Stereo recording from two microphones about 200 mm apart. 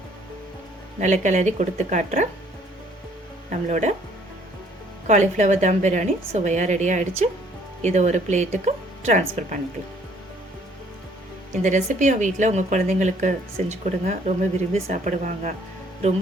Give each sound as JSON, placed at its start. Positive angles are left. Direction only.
{"t": 0.9, "sound": "a woman's voice", "side_deg": -35}
{"t": 3.7, "sound": "a woman's voice", "side_deg": -35}
{"t": 5.0, "sound": "a woman's voice", "side_deg": -35}
{"t": 11.5, "sound": "a woman's voice", "side_deg": -35}